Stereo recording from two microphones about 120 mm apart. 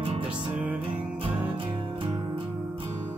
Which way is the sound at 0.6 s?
10° right (ahead or behind).